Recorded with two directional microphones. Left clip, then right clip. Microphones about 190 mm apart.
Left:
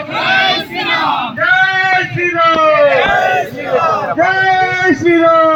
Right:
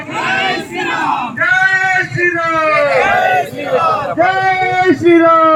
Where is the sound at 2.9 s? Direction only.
Centre (ahead or behind).